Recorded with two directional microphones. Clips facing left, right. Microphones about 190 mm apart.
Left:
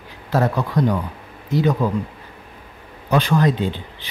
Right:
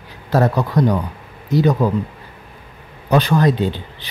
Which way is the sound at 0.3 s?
40° right (ahead or behind).